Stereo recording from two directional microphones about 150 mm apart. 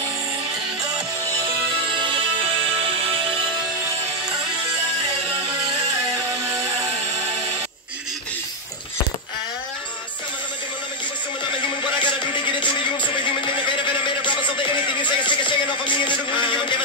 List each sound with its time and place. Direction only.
2.0 s music: 35° right (ahead or behind)
11.8 s music: 35° left (ahead or behind)
14.0 s a sound: 30° left (ahead or behind)